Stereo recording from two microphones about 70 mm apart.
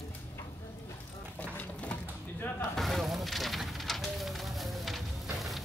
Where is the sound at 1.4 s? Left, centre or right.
Centre.